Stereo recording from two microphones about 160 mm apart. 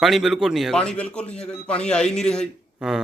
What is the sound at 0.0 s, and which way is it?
Speech, centre (ahead or behind).